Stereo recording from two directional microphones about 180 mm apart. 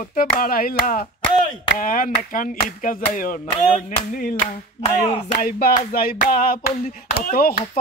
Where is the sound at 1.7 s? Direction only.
50° left (ahead or behind).